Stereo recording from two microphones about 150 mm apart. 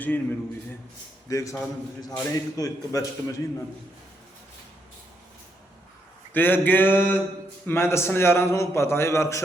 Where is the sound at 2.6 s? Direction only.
20° left (ahead or behind).